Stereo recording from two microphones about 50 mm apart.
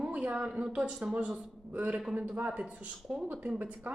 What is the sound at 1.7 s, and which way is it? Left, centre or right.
Speech, right.